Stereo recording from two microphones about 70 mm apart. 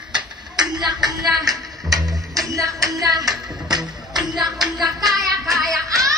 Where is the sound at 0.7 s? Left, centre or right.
Right.